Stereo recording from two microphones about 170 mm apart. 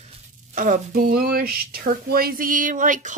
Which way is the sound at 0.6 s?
55° right (ahead or behind).